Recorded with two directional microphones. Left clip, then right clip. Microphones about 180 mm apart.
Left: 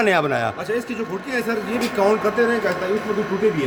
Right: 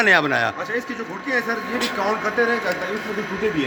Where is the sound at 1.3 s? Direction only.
30° left (ahead or behind).